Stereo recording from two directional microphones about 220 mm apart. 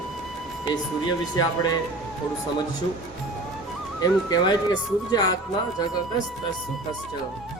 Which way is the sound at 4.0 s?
20° left (ahead or behind).